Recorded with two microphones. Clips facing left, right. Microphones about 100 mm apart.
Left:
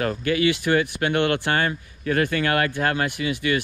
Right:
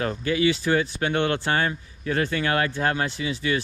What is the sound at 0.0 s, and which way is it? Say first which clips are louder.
Speech: left 1 dB; 55° left (ahead or behind).